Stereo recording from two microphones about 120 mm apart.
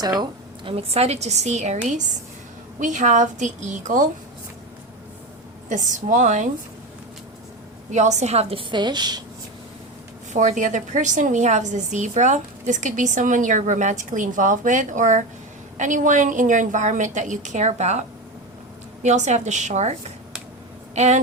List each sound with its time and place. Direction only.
0.0 s speech: 35° right (ahead or behind); by 2.0 s 75° right (ahead or behind)
2.8 s a woman's voice: 90° right
5.6 s a woman's voice: 90° right
7.9 s speech: 75° right (ahead or behind); by 8.6 s 55° right (ahead or behind)
8.7 s speech: 40° right (ahead or behind)
10.3 s a woman's voice: 90° right; by 18.0 s 70° right (ahead or behind)
19.0 s a woman's voice: 80° right